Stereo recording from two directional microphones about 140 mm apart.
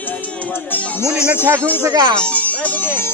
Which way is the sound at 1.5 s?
10° left (ahead or behind).